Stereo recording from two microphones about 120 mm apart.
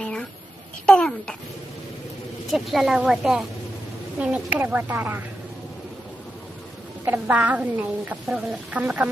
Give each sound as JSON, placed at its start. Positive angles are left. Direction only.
{"t": 0.0, "sound": "a sound", "side_deg": 10}
{"t": 0.9, "sound": "a child's voice", "side_deg": 5}
{"t": 2.5, "sound": "a woman's voice", "side_deg": 0}
{"t": 7.0, "sound": "a woman's voice", "side_deg": -15}